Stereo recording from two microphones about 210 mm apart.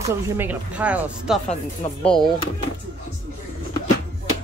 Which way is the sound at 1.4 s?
30° left (ahead or behind).